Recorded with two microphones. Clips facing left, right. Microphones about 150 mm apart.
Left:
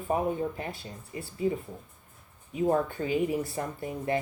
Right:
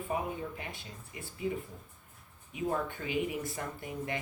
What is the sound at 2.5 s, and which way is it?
Speech, 35° left (ahead or behind).